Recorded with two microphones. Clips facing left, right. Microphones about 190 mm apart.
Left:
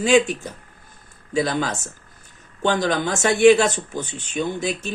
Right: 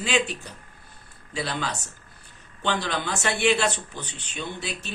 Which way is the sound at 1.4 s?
45° left (ahead or behind).